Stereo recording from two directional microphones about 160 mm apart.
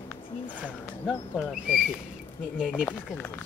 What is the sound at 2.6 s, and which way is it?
Speech, 5° right (ahead or behind).